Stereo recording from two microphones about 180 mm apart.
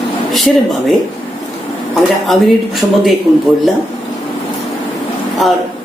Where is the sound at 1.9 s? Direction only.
Centre (ahead or behind).